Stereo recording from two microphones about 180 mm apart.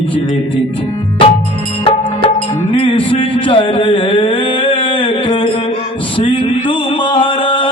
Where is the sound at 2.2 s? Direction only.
30° left (ahead or behind).